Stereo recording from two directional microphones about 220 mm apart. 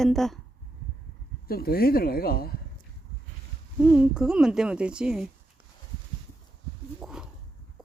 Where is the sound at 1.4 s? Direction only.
45° left (ahead or behind).